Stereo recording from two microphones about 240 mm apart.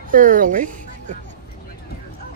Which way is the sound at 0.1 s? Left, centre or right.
Right.